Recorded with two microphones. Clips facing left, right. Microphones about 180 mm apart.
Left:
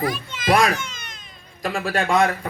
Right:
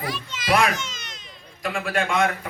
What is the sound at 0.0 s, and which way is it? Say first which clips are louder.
Children playing: left 6 dB; 50° left (ahead or behind).